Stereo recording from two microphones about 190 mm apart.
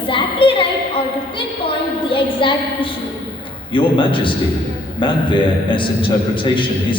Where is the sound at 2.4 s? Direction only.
25° left (ahead or behind).